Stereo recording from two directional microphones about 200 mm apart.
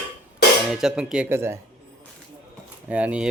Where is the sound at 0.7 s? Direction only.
5° right (ahead or behind).